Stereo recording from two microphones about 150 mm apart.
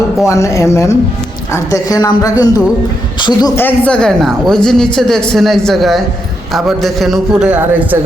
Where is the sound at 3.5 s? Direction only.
10° left (ahead or behind); by 7.9 s 10° right (ahead or behind).